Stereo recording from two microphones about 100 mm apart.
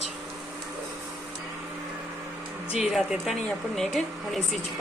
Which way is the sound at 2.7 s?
5° right (ahead or behind).